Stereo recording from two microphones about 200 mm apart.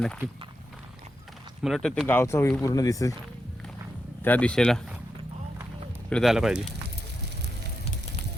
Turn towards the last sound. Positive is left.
turn(degrees=-5)  # may be behind; listen again after turning